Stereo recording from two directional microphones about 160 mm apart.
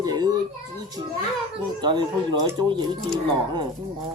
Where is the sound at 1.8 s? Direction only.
30° right (ahead or behind).